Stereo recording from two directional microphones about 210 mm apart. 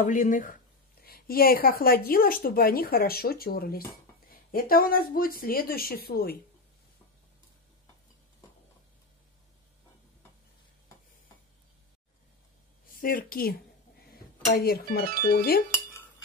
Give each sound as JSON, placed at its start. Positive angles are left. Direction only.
{"t": 0.0, "sound": "speech", "side_deg": 40}
{"t": 12.8, "sound": "a woman's voice", "side_deg": 45}
{"t": 15.0, "sound": "speech", "side_deg": -40}
{"t": 15.3, "sound": "speech", "side_deg": 45}